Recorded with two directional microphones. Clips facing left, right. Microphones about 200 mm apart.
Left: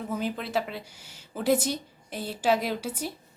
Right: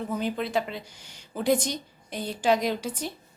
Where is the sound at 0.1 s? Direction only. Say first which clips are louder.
Right 1 dB; 5° left (ahead or behind).